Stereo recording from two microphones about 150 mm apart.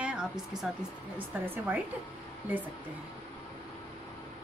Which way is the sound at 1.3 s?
10° right (ahead or behind).